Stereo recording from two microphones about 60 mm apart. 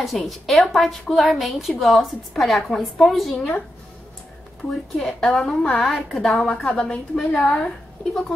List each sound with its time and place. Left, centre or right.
0.0 s a woman's voice: centre
3.3 s a woman's voice: centre
4.9 s a woman's voice: centre
6.6 s a woman's voice: centre
7.2 s a woman's voice: centre